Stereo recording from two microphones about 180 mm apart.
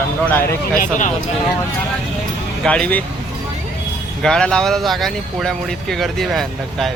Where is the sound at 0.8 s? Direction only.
45° left (ahead or behind).